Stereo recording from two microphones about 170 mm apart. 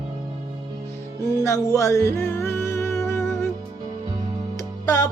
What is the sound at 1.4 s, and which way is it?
Music, 15° left (ahead or behind).